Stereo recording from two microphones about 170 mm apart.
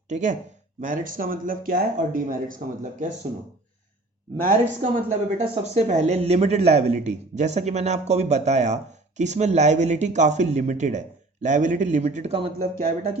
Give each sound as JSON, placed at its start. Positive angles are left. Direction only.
{"t": 0.1, "sound": "speech", "side_deg": -45}
{"t": 4.4, "sound": "speech", "side_deg": -45}